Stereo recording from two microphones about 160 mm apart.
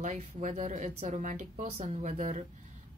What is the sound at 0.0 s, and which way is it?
Speech, 50° right (ahead or behind).